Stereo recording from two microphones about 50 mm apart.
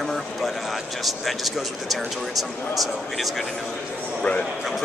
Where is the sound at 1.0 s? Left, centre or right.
Centre.